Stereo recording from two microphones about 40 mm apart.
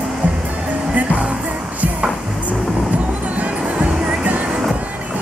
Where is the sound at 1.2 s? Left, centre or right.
Right.